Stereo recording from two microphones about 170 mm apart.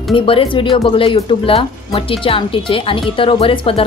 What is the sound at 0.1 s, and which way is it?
Speech, 30° left (ahead or behind).